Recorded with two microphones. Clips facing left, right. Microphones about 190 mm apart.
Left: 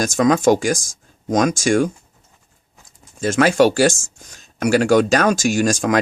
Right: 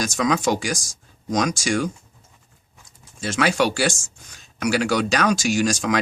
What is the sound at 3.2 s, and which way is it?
Speech, 45° left (ahead or behind).